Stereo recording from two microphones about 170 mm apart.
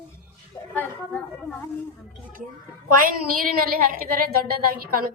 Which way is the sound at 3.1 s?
60° right (ahead or behind).